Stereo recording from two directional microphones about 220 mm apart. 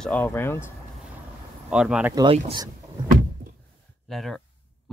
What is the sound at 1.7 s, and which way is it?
Speech, 5° right (ahead or behind).